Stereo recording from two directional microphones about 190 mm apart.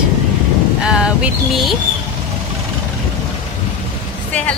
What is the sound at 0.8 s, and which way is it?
Music, 5° right (ahead or behind).